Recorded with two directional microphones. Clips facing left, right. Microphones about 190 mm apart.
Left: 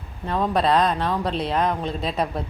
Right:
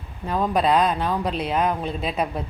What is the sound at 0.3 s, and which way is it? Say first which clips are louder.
Speech: even; 5° right (ahead or behind).